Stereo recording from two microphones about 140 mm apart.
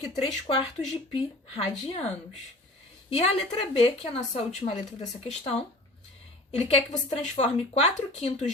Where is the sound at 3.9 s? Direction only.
50° left (ahead or behind).